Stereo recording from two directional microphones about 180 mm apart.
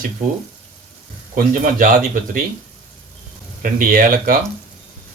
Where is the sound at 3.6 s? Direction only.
50° right (ahead or behind).